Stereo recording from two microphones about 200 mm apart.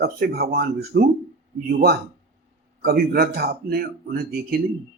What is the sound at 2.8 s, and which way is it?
Speech, 50° right (ahead or behind).